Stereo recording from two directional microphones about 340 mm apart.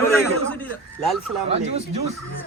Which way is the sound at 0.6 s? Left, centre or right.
Centre.